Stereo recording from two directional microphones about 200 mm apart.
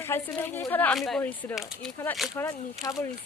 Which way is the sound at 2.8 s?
15° left (ahead or behind).